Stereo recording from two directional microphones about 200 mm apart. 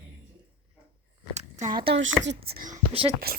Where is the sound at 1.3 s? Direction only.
40° right (ahead or behind).